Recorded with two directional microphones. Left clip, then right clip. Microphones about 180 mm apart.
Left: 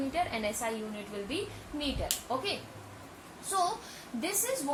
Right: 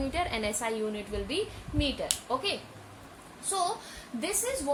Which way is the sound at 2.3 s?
60° right (ahead or behind).